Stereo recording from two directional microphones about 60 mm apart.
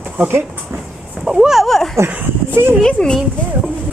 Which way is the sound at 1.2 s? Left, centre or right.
Centre.